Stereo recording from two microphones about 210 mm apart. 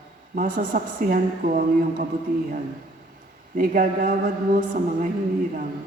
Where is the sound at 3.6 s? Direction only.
40° right (ahead or behind).